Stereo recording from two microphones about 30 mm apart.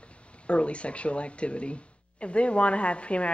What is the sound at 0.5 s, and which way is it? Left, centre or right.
A woman's voice, left.